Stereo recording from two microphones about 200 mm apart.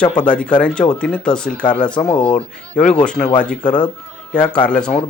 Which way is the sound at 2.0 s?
25° left (ahead or behind).